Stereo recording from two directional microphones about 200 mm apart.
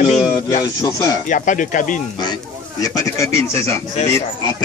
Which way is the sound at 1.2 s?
40° left (ahead or behind).